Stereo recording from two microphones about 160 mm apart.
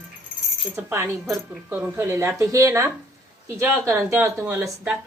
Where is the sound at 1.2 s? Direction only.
Centre (ahead or behind).